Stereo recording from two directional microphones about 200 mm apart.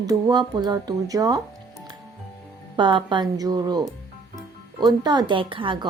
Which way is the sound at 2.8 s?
25° right (ahead or behind).